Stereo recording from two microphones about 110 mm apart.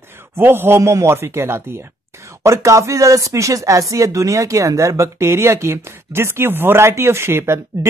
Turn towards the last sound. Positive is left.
turn(degrees=-25)  # may be behind; listen again after turning